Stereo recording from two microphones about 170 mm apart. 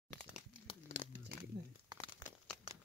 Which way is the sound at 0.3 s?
40° left (ahead or behind).